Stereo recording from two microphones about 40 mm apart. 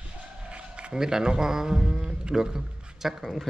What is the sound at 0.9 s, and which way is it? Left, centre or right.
A man's voice, centre.